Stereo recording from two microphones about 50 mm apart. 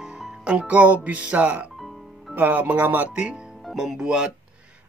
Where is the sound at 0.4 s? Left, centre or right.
Right.